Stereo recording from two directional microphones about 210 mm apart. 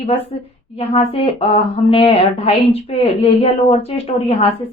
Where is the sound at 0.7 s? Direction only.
30° left (ahead or behind).